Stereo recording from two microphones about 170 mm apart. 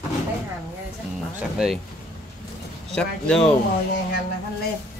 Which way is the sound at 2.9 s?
5° left (ahead or behind).